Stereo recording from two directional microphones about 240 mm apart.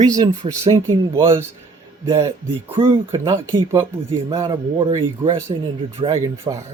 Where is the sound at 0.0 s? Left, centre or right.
Centre.